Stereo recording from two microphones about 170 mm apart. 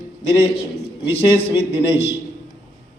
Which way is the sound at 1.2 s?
30° left (ahead or behind).